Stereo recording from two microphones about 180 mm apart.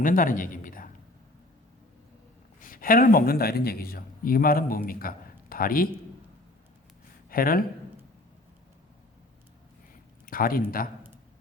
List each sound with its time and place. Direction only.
0.0 s speech: 50° left (ahead or behind)
2.6 s speech: 50° left (ahead or behind)
7.3 s speech: 55° left (ahead or behind)
9.9 s a sound: 55° left (ahead or behind)